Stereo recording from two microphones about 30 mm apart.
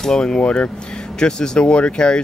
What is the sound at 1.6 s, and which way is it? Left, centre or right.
Speech, left.